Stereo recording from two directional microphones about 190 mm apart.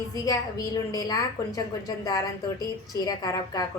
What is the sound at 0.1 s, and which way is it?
A woman's voice, 20° left (ahead or behind).